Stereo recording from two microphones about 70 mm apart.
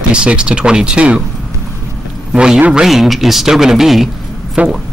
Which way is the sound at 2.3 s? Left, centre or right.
Centre.